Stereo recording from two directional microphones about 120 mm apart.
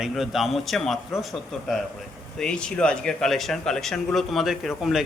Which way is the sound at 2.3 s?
5° left (ahead or behind).